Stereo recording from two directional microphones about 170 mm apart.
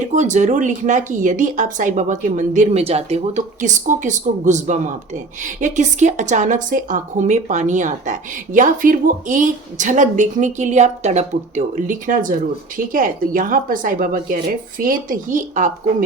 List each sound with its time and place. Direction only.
0.1 s speech: 45° right (ahead or behind)